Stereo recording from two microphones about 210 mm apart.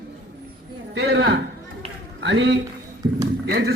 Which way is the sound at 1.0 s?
55° right (ahead or behind).